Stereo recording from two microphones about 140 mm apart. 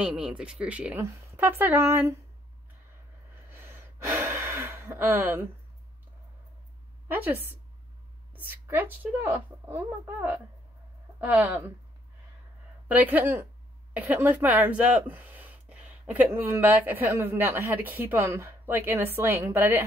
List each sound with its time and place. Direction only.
0.0 s speech: 5° right (ahead or behind)
3.5 s gasp: 15° right (ahead or behind)
7.1 s speech: 15° right (ahead or behind)
12.8 s speech: 10° right (ahead or behind)